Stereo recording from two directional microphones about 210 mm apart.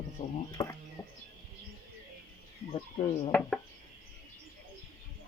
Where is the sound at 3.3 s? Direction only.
5° left (ahead or behind).